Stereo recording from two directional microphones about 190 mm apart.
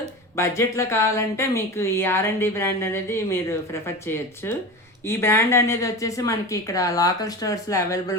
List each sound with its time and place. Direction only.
0.3 s speech: 15° left (ahead or behind)